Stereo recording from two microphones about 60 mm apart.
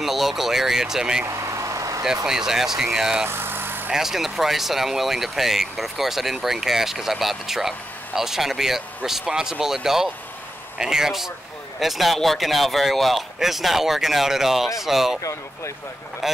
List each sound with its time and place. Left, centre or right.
0.0 s speech: centre
1.2 s vehicle: right
2.2 s speech: centre
3.3 s vehicle: right
3.9 s speech: centre